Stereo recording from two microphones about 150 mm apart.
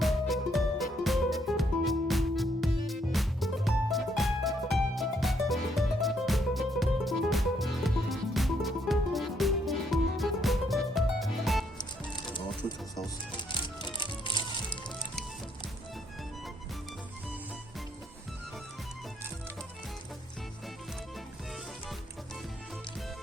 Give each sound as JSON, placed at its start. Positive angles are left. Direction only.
{"t": 0.0, "sound": "music", "side_deg": 0}
{"t": 13.3, "sound": "music", "side_deg": 30}